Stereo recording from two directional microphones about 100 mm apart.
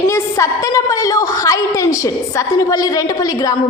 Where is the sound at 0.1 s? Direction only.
30° left (ahead or behind).